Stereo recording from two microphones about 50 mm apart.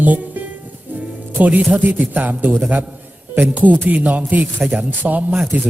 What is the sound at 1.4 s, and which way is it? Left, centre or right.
Speech, right.